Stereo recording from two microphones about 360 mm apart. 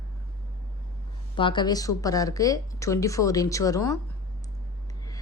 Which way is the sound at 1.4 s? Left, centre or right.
Centre.